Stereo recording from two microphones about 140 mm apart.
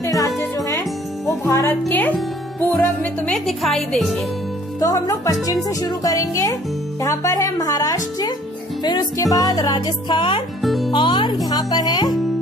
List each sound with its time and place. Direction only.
0.0 s music: 25° left (ahead or behind)
1.4 s a woman's voice: 20° left (ahead or behind); by 4.1 s centre (ahead or behind)
4.7 s music: 25° left (ahead or behind)
10.6 s music: centre (ahead or behind)
10.9 s speech: 35° left (ahead or behind)
11.4 s music: 30° left (ahead or behind)